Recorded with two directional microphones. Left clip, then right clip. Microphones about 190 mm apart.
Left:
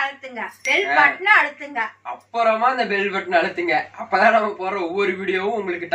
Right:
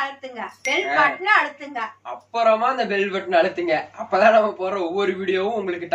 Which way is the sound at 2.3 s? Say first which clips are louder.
Even; 5° right (ahead or behind).